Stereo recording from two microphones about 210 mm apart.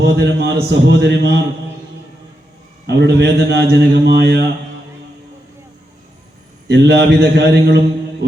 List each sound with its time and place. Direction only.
0.0 s a man's voice: 50° right (ahead or behind)
2.8 s a man's voice: 55° right (ahead or behind)
6.7 s a man's voice: 50° right (ahead or behind)